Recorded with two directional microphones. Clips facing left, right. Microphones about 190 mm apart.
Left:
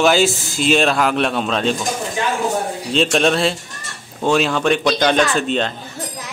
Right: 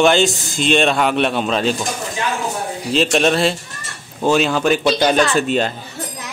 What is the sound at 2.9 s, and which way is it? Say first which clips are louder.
A man's voice: right 1 dB; centre (ahead or behind).